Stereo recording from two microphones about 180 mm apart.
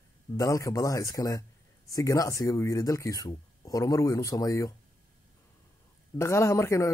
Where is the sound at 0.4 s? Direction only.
20° left (ahead or behind).